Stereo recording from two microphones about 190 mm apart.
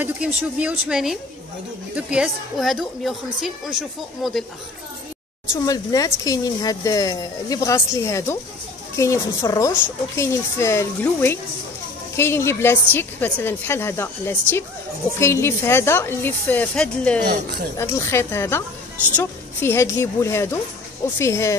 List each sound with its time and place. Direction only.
0.0 s a woman's voice: 5° right (ahead or behind)
5.5 s speech: 20° left (ahead or behind)